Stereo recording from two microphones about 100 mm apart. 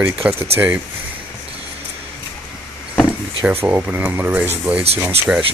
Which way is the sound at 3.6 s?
20° right (ahead or behind).